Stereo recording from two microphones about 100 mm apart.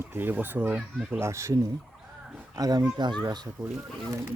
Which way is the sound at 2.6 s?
40° right (ahead or behind).